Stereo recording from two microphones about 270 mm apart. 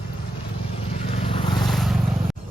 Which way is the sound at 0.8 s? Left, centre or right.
Left.